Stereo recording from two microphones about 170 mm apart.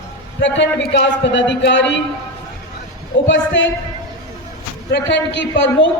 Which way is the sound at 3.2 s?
90° left.